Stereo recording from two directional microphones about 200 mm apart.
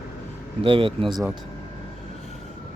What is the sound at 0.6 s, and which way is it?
Speech, 25° right (ahead or behind).